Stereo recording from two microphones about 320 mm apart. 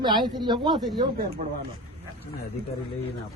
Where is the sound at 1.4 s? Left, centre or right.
Right.